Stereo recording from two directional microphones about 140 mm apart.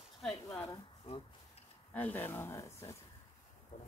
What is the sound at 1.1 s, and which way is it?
Speech, 45° left (ahead or behind).